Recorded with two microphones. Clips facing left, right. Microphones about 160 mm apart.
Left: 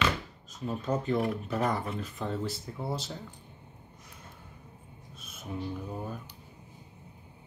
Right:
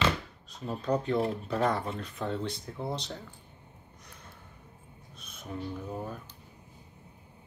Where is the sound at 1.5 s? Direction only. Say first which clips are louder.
Right 1 dB; centre (ahead or behind).